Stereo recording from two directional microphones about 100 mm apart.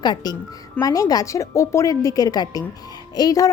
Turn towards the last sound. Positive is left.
turn(degrees=40)  # may be behind; listen again after turning